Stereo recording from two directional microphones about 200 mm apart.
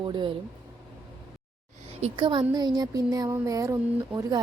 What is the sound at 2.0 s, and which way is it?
A woman's voice, 30° right (ahead or behind).